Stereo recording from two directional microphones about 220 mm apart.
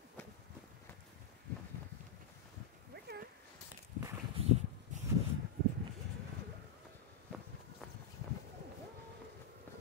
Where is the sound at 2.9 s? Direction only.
45° right (ahead or behind).